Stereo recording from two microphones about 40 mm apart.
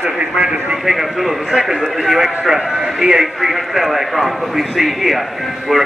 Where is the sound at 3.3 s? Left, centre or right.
Centre.